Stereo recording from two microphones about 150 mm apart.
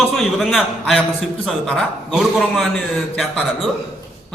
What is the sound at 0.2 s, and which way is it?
A man's voice, centre (ahead or behind).